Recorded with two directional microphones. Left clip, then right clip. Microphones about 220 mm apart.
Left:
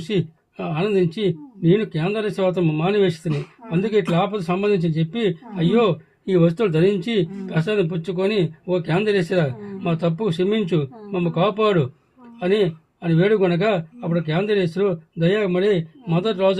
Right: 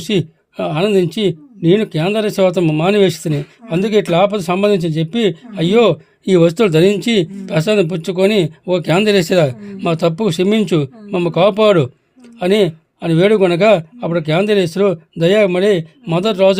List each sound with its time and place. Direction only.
0.0 s speech: 45° right (ahead or behind)